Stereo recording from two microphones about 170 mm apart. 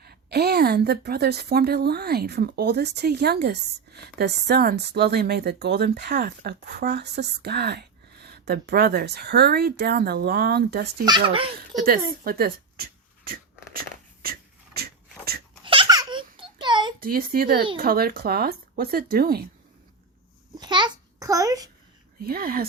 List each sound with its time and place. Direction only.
0.0 s a woman's voice: 70° right (ahead or behind)
11.0 s speech: 25° right (ahead or behind)
11.8 s a sound: 60° right (ahead or behind)
15.6 s baby laughter: 30° right (ahead or behind)
17.0 s speech: 60° right (ahead or behind)
20.6 s a sound: 25° right (ahead or behind)
22.2 s speech: 60° right (ahead or behind)